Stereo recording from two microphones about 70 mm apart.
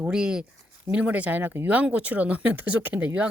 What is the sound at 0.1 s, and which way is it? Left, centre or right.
Speech, centre.